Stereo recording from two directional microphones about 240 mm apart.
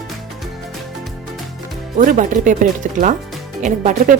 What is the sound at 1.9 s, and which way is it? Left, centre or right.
Speech, right.